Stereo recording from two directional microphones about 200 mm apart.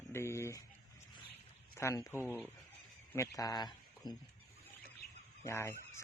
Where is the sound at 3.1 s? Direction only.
15° left (ahead or behind).